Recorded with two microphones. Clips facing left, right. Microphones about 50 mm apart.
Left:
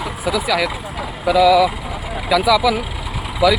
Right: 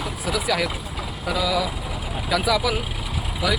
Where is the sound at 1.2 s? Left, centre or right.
Left.